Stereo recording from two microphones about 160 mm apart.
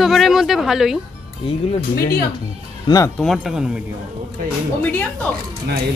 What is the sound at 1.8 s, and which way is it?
Speech, 70° left (ahead or behind).